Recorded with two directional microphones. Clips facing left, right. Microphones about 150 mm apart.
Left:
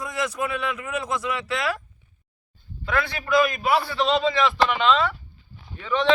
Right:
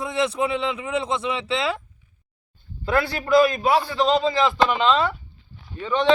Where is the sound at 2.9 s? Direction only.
30° right (ahead or behind).